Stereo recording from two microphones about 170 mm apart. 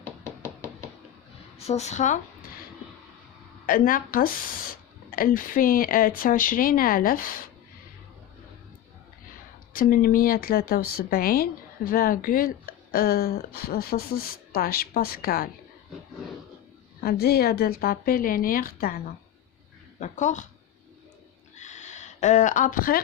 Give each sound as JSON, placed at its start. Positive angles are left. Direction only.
{"t": 0.0, "sound": "hammer", "side_deg": 15}
{"t": 1.5, "sound": "a woman's voice", "side_deg": 40}
{"t": 3.7, "sound": "a woman's voice", "side_deg": 55}
{"t": 9.7, "sound": "a woman's voice", "side_deg": 55}
{"t": 17.0, "sound": "a woman's voice", "side_deg": 65}
{"t": 21.5, "sound": "a sound", "side_deg": 45}